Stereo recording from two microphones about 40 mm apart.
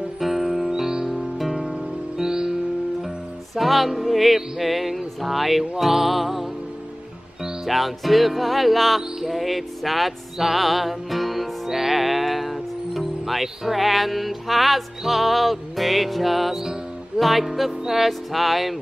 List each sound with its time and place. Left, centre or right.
0.2 s music: centre
3.5 s music: centre
7.6 s music: centre